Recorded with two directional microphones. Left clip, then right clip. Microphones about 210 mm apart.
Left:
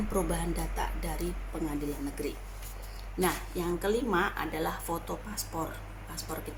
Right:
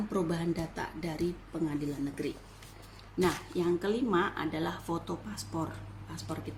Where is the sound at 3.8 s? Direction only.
5° right (ahead or behind).